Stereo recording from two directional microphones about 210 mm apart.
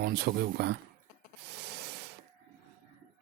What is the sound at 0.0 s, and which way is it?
Speech, 50° right (ahead or behind).